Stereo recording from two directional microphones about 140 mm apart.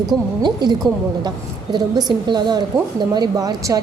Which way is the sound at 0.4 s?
30° right (ahead or behind).